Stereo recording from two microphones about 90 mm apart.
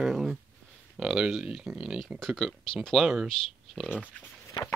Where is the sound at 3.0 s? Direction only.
10° right (ahead or behind).